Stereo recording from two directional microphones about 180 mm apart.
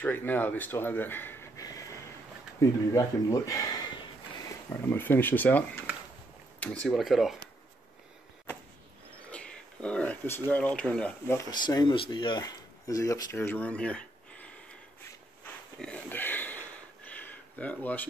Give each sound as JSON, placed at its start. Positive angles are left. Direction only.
{"t": 0.0, "sound": "speech", "side_deg": 10}
{"t": 4.8, "sound": "speech", "side_deg": 10}
{"t": 6.6, "sound": "speech", "side_deg": 5}
{"t": 9.3, "sound": "a sound", "side_deg": 5}
{"t": 10.5, "sound": "speech", "side_deg": 10}
{"t": 11.5, "sound": "speech", "side_deg": 25}
{"t": 15.8, "sound": "a sound", "side_deg": 10}